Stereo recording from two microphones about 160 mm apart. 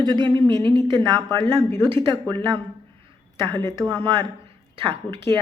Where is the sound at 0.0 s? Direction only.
25° right (ahead or behind).